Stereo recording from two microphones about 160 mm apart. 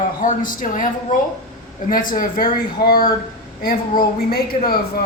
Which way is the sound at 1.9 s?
60° left (ahead or behind).